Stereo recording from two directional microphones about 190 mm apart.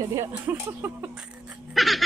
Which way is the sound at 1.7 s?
Centre (ahead or behind).